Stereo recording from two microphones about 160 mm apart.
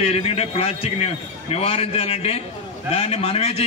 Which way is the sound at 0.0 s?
40° left (ahead or behind).